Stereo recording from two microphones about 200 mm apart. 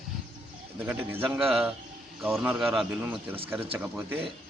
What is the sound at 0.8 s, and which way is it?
A man's voice, 10° right (ahead or behind).